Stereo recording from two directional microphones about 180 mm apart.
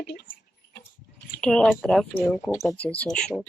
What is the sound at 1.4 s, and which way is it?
Speech, 5° left (ahead or behind).